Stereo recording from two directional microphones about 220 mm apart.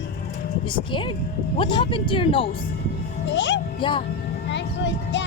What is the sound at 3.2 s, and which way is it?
Speech, 55° left (ahead or behind).